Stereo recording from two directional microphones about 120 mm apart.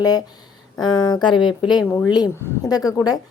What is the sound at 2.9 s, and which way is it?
Speech, 30° left (ahead or behind).